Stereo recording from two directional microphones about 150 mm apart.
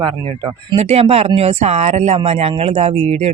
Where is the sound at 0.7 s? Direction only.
45° right (ahead or behind).